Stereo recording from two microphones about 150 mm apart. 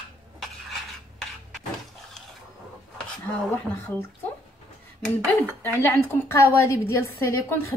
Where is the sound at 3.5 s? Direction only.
15° left (ahead or behind).